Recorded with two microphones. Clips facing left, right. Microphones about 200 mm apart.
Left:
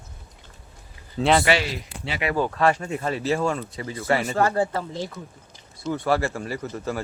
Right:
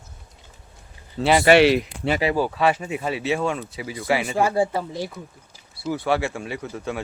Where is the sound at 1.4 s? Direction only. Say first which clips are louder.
Right 9 dB; 65° right (ahead or behind).